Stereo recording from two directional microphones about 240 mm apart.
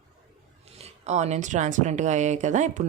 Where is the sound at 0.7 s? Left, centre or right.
Right.